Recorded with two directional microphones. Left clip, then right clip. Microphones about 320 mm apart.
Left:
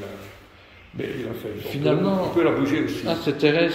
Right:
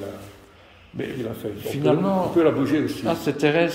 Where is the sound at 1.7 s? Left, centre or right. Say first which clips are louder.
Right 1 dB; centre.